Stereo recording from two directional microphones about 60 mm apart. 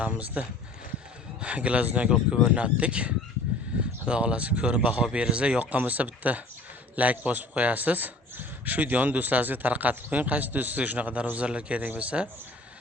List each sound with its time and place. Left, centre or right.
0.0 s a man's voice: right